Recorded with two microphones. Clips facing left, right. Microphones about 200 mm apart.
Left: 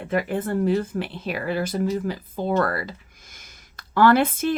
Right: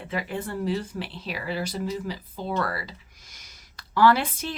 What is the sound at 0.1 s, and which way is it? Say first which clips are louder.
Speech: left 7 dB; 50° left (ahead or behind).